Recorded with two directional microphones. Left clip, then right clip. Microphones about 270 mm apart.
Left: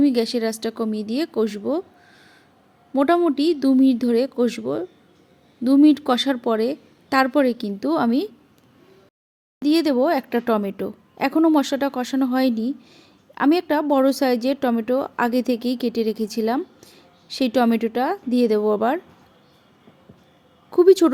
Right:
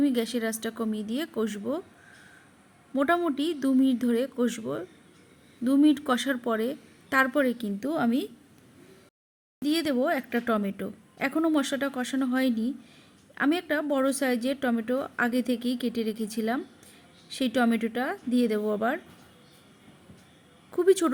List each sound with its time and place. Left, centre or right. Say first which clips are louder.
0.0 s a woman's voice: left 7 dB; centre
2.9 s a woman's voice: left 7 dB; centre
9.6 s a woman's voice: left 8 dB; centre
20.7 s a woman's voice: left 9 dB; centre